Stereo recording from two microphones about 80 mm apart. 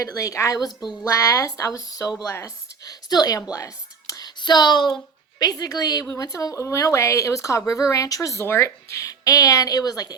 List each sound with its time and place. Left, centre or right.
0.0 s speech: left
2.2 s speech: left
2.9 s speech: left
3.5 s whispering: left
4.4 s speech: left
5.4 s speech: left